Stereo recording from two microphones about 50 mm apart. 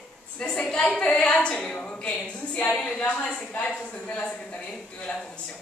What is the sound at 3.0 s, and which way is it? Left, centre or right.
A woman's voice, left.